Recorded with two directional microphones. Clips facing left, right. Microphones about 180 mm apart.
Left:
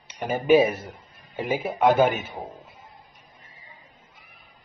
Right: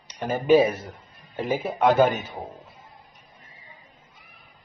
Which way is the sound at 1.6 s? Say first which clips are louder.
Even; 5° left (ahead or behind).